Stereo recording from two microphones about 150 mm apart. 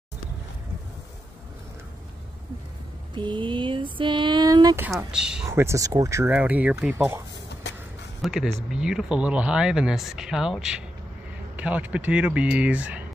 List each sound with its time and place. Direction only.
3.2 s speech: 30° right (ahead or behind)
5.1 s speech: 5° right (ahead or behind)
5.5 s speech: 20° right (ahead or behind)
8.2 s speech: centre (ahead or behind)